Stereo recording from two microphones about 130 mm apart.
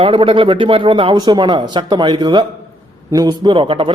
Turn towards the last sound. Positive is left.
turn(degrees=-40)  # may be behind; listen again after turning